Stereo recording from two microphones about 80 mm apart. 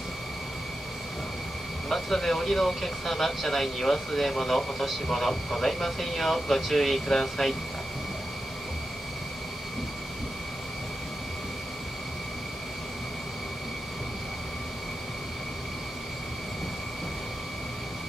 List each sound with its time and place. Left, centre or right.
1.9 s speech: centre